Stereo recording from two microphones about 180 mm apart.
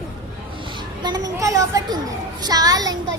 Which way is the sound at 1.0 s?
20° right (ahead or behind).